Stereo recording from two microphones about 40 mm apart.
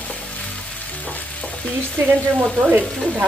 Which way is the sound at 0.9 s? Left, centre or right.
Left.